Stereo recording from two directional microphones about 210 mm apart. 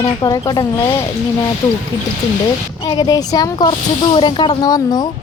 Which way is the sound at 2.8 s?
20° left (ahead or behind).